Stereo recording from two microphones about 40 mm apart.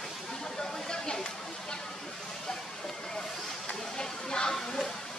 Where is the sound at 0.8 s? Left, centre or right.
Centre.